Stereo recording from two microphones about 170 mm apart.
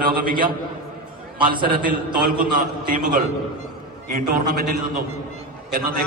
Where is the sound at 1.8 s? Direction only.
60° right (ahead or behind).